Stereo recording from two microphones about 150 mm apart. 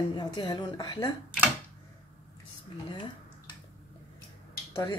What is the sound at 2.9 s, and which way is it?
Dishes, 30° left (ahead or behind).